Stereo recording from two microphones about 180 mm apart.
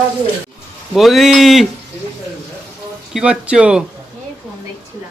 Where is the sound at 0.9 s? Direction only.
Centre (ahead or behind).